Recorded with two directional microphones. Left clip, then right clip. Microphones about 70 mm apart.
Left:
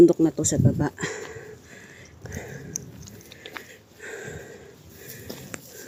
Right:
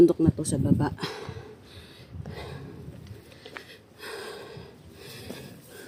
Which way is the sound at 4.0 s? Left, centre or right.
Centre.